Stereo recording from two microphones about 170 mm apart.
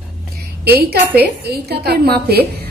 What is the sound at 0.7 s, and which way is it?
A woman's voice, 70° right (ahead or behind).